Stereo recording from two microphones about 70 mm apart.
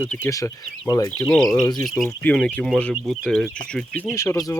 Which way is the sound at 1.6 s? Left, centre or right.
Left.